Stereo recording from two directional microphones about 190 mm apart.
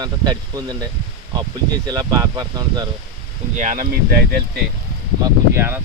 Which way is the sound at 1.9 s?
20° right (ahead or behind).